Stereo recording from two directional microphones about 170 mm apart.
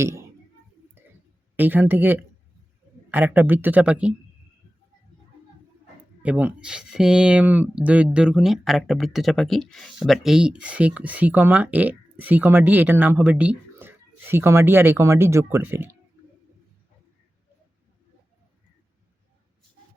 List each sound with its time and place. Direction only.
0.0 s speech: 15° right (ahead or behind)
1.0 s a sound: 10° right (ahead or behind)
1.5 s speech: 10° right (ahead or behind)
6.2 s speech: 10° right (ahead or behind)